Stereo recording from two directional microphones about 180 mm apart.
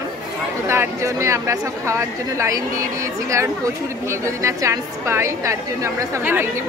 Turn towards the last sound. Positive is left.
turn(degrees=-15)  # may be behind; listen again after turning